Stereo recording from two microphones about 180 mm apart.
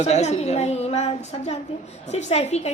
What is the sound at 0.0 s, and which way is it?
A woman's voice, 40° left (ahead or behind).